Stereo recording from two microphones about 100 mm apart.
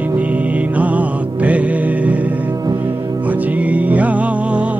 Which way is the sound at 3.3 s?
15° right (ahead or behind).